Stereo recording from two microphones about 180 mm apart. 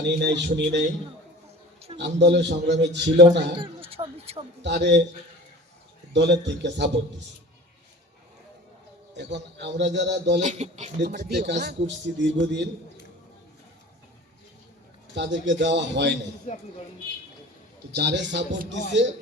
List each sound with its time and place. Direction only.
0.0 s a man's voice: 75° right (ahead or behind)
2.0 s a man's voice: 75° right (ahead or behind)
3.6 s speech: 30° right (ahead or behind)
4.6 s a man's voice: 75° right (ahead or behind)
6.1 s a man's voice: 75° right (ahead or behind)
9.1 s a man's voice: 75° right (ahead or behind)
10.4 s speech: 40° right (ahead or behind)
11.3 s a man's voice: 70° right (ahead or behind)
15.1 s a man's voice: 80° right
17.9 s a man's voice: 70° right (ahead or behind); by 19.0 s 85° right